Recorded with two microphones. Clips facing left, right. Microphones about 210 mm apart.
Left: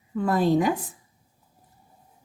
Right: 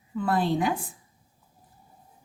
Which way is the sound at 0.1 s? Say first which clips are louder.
Left 4 dB; 45° left (ahead or behind).